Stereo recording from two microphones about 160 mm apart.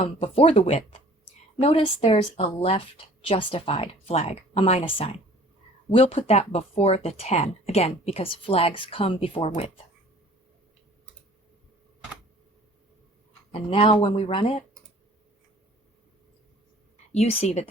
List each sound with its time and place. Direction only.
0.0 s speech: 35° left (ahead or behind)
13.5 s speech: 35° left (ahead or behind)
17.1 s speech: 40° left (ahead or behind)